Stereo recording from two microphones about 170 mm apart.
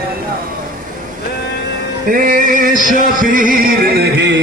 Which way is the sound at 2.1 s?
50° right (ahead or behind).